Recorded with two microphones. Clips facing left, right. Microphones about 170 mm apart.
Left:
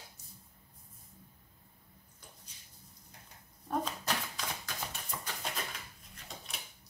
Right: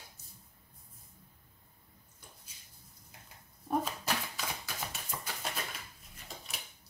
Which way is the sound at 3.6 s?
10° right (ahead or behind).